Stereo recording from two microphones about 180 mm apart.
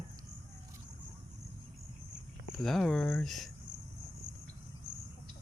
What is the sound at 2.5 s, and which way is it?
Speech, centre (ahead or behind).